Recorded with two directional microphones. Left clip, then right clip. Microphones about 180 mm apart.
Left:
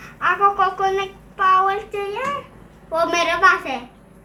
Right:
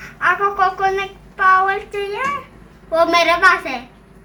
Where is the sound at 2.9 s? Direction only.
10° right (ahead or behind).